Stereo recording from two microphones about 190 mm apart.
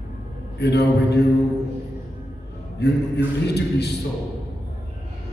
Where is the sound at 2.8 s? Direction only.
60° left (ahead or behind).